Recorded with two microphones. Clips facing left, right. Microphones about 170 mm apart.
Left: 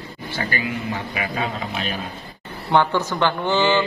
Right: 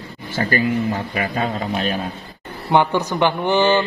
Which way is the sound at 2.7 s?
15° right (ahead or behind).